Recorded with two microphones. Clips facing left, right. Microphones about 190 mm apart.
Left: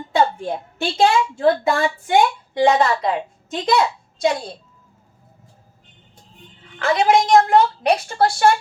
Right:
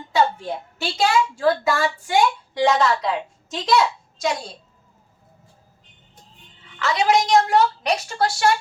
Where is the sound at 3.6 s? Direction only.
55° left (ahead or behind).